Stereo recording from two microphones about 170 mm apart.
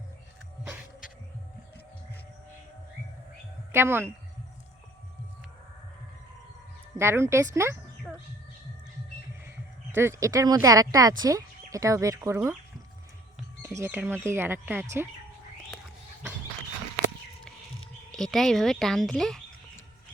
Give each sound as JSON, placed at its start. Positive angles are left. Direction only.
{"t": 3.7, "sound": "speech", "side_deg": -15}
{"t": 6.9, "sound": "speech", "side_deg": -15}
{"t": 9.9, "sound": "speech", "side_deg": -15}
{"t": 13.6, "sound": "speech", "side_deg": -15}
{"t": 18.1, "sound": "speech", "side_deg": 0}